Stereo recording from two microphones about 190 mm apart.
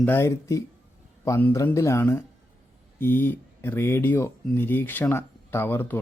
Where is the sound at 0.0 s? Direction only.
10° left (ahead or behind).